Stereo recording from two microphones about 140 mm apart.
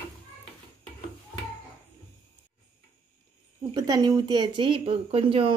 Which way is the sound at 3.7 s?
30° right (ahead or behind).